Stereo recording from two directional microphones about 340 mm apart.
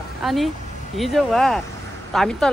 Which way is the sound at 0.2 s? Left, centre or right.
Centre.